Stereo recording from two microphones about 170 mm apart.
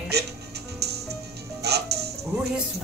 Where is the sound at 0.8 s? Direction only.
75° right (ahead or behind).